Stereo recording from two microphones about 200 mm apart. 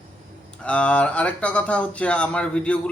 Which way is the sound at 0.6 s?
5° left (ahead or behind).